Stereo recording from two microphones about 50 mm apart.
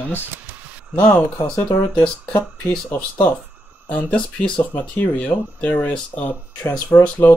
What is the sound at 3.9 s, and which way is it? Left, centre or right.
Speech, left.